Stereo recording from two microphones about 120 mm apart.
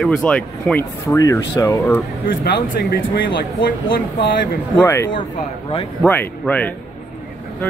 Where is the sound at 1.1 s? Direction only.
30° left (ahead or behind).